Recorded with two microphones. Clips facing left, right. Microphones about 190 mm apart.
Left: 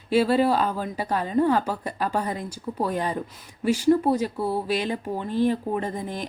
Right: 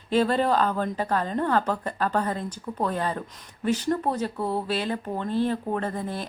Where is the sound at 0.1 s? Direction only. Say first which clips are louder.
Left 2 dB; 10° left (ahead or behind).